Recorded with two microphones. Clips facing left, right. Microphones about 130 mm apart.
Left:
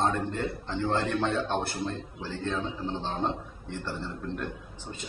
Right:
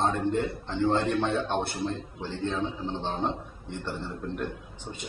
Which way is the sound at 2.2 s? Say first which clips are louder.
Right 2 dB; 20° right (ahead or behind).